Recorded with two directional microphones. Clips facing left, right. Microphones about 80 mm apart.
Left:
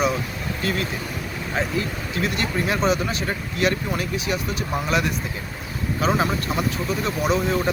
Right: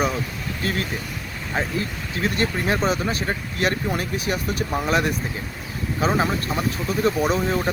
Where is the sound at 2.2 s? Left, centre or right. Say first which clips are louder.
Right 2 dB; right.